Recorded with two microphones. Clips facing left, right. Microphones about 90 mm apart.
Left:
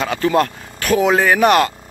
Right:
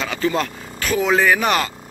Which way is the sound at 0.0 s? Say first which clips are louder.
Left 5 dB; 60° left (ahead or behind).